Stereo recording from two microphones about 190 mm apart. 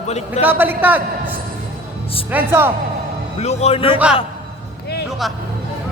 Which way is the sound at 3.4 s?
35° left (ahead or behind).